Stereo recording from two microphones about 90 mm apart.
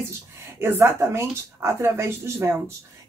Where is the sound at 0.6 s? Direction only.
25° right (ahead or behind).